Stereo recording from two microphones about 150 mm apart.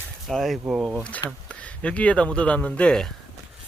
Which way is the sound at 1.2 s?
10° left (ahead or behind).